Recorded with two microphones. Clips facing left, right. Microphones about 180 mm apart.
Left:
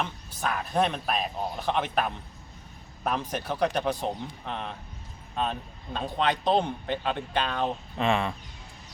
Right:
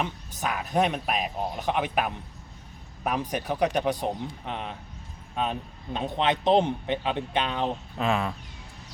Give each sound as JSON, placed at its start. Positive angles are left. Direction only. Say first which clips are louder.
{"t": 0.0, "sound": "speech", "louder": "right 1 dB", "side_deg": -15}
{"t": 7.9, "sound": "speech", "louder": "left 1 dB", "side_deg": 0}